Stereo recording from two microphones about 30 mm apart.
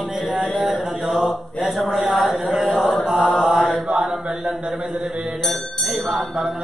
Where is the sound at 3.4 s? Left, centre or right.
Right.